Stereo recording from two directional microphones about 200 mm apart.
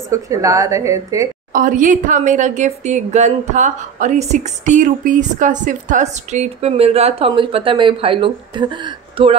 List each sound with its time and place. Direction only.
0.1 s a woman's voice: 15° right (ahead or behind)
1.5 s speech: 40° right (ahead or behind)